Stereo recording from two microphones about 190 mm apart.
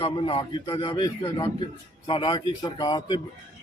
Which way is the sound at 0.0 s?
30° left (ahead or behind).